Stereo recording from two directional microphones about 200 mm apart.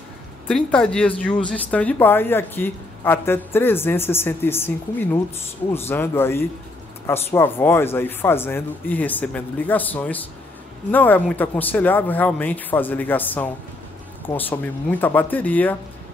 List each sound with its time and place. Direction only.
0.5 s speech: 5° left (ahead or behind)